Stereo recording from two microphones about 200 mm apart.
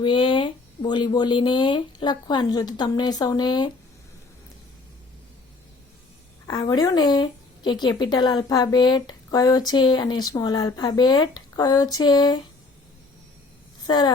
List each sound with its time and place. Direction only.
0.0 s speech: 25° left (ahead or behind)
6.5 s speech: 20° left (ahead or behind)
13.8 s speech: 20° left (ahead or behind)